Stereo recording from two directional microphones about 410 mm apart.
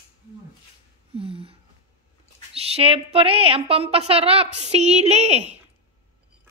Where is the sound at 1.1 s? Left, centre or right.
Centre.